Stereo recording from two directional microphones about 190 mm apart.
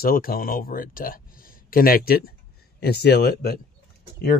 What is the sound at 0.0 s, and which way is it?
Speech, 50° left (ahead or behind).